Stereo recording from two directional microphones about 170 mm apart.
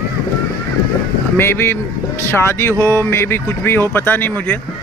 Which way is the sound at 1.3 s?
15° left (ahead or behind).